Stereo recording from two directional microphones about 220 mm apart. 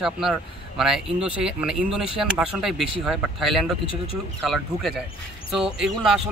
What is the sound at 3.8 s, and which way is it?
Speech, 25° left (ahead or behind).